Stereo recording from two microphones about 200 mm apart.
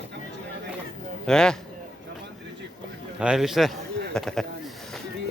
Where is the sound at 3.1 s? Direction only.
5° right (ahead or behind).